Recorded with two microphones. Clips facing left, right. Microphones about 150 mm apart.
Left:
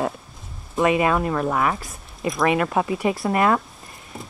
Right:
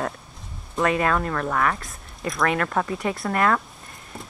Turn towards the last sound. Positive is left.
turn(degrees=15)  # may be behind; listen again after turning